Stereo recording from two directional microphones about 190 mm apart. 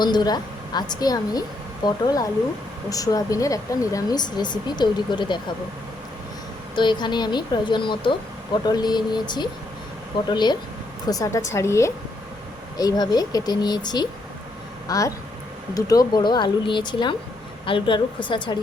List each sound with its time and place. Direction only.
0.0 s a woman's voice: 20° left (ahead or behind)
6.7 s speech: 25° left (ahead or behind)